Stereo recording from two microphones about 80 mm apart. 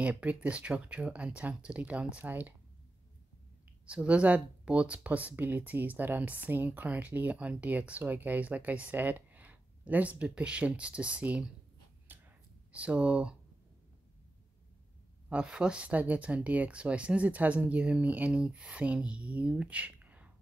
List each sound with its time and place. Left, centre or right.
0.0 s speech: centre
3.8 s speech: centre
12.1 s a sound: right
12.7 s speech: centre
15.2 s speech: centre